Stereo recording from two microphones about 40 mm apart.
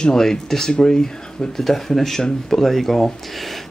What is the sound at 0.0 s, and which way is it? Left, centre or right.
Speech, centre.